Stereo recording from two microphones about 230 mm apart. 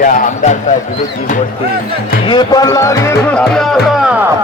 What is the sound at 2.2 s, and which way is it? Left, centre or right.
Speech, centre.